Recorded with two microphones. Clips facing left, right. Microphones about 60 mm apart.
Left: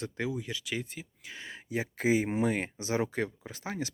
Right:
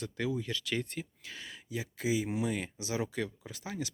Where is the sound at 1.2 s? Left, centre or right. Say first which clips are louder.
Left 2 dB; left.